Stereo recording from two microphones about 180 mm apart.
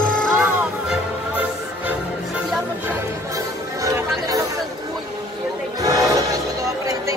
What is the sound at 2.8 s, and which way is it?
Music, 15° right (ahead or behind).